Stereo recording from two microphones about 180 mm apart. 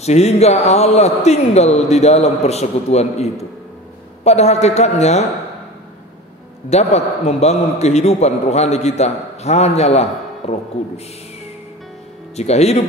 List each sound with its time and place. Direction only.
0.0 s speech: 35° left (ahead or behind)
6.7 s speech: 35° left (ahead or behind)
12.4 s speech: 35° left (ahead or behind)